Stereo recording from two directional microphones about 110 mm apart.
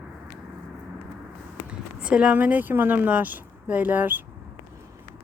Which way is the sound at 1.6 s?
10° right (ahead or behind).